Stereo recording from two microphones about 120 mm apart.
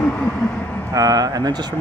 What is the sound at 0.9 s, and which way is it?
Speech, 30° right (ahead or behind).